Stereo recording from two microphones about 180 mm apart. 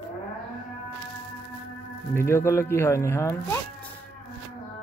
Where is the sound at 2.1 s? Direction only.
15° left (ahead or behind).